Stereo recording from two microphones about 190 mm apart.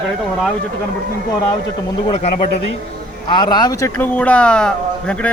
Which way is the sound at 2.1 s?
35° left (ahead or behind).